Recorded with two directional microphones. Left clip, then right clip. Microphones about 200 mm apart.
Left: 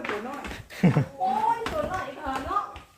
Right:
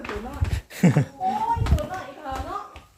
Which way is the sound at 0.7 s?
35° right (ahead or behind).